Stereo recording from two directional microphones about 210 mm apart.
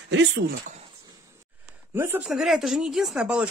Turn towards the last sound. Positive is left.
turn(degrees=-5)  # may be behind; listen again after turning